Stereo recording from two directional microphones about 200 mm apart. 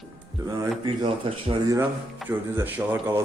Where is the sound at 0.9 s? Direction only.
25° right (ahead or behind).